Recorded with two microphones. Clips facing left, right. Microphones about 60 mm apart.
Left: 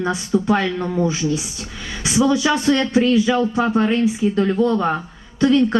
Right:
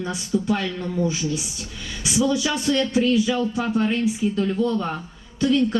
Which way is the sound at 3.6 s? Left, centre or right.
Left.